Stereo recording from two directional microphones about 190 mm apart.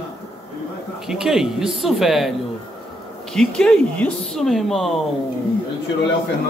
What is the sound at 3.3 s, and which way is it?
Speech, 5° left (ahead or behind).